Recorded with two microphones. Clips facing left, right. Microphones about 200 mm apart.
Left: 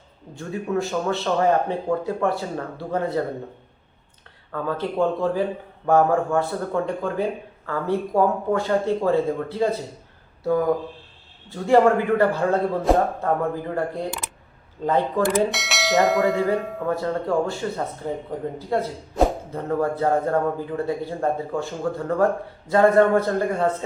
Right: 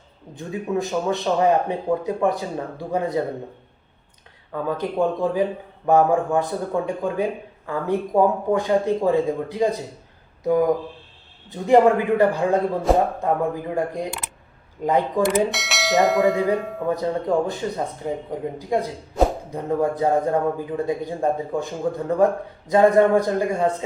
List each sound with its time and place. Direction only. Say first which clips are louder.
0.3 s a man's voice: even; 15° right (ahead or behind)
4.5 s a man's voice: right 1 dB; 15° right (ahead or behind)
12.9 s speech: right 1 dB; centre (ahead or behind)
13.2 s a man's voice: right 1 dB; 15° right (ahead or behind)
15.4 s speech: even; centre (ahead or behind)
16.8 s a man's voice: right 1 dB; 15° right (ahead or behind)